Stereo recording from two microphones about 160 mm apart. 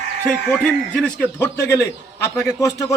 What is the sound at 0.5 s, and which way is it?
Speech, 5° left (ahead or behind).